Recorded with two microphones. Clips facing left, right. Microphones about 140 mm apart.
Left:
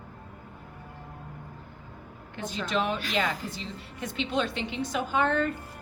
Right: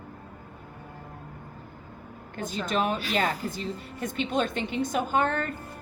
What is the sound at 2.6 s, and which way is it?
A woman's voice, 45° right (ahead or behind).